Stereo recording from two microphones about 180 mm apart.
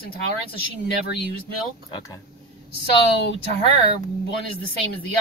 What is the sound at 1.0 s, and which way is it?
Speech, 60° left (ahead or behind).